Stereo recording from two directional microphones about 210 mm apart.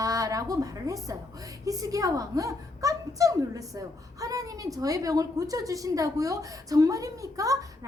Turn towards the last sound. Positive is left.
turn(degrees=-15)  # may be behind; listen again after turning